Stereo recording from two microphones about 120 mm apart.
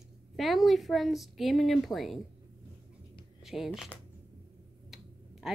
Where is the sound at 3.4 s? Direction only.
5° right (ahead or behind).